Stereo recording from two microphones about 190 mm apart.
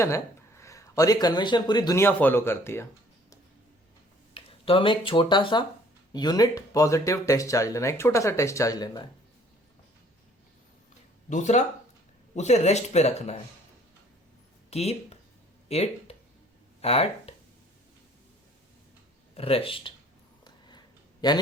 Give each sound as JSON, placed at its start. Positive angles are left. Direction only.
{"t": 0.0, "sound": "speech", "side_deg": 15}
{"t": 4.4, "sound": "speech", "side_deg": 30}
{"t": 11.3, "sound": "speech", "side_deg": 40}
{"t": 14.7, "sound": "speech", "side_deg": 35}
{"t": 19.3, "sound": "speech", "side_deg": 30}
{"t": 20.4, "sound": "a sound", "side_deg": 20}